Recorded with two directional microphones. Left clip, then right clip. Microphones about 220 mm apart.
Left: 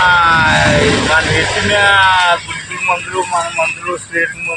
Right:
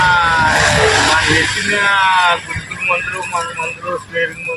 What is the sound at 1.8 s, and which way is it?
Speech, 15° left (ahead or behind).